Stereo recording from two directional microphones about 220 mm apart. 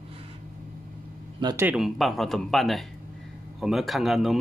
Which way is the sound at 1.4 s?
20° right (ahead or behind).